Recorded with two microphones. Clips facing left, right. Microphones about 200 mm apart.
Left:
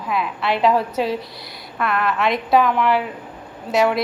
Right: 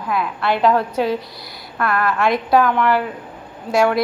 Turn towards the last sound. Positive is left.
turn(degrees=0)  # may be behind; listen again after turning